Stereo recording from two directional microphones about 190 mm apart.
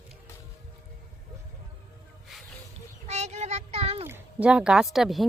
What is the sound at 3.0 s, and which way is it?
Child singing, 35° right (ahead or behind).